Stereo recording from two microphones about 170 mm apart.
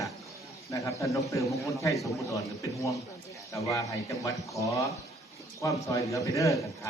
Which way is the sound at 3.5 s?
20° left (ahead or behind).